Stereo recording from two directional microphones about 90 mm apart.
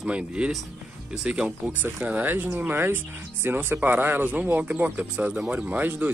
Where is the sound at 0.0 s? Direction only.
10° right (ahead or behind).